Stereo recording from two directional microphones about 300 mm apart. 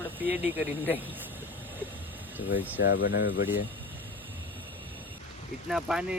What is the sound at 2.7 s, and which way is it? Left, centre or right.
Speech, left.